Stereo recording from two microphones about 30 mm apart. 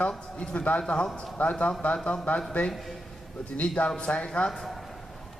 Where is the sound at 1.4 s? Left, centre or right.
Left.